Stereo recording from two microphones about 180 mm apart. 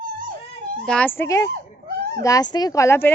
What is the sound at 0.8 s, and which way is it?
Speech, 5° left (ahead or behind).